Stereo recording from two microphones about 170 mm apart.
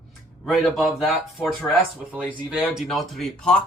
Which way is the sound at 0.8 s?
Centre (ahead or behind).